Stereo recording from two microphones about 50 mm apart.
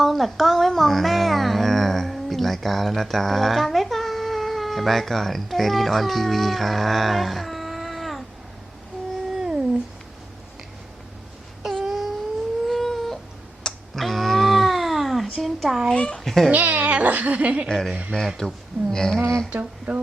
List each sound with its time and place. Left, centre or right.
0.0 s music: centre
9.4 s a sound: centre
11.9 s a sound: centre
16.0 s a child's voice: centre
16.2 s speech: centre
16.5 s speech: right
17.7 s speech: centre
19.5 s speech: right